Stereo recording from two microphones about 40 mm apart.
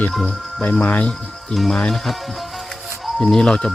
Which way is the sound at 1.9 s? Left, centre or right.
Centre.